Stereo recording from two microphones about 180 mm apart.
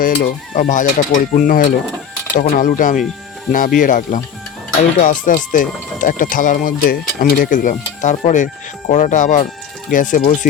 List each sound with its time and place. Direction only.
0.0 s speech: 45° left (ahead or behind)